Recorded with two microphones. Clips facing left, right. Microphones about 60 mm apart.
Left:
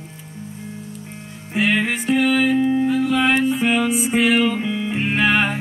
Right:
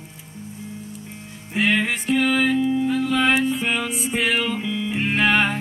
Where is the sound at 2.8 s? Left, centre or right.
Centre.